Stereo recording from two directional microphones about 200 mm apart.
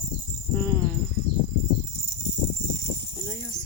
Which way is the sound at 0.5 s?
10° left (ahead or behind).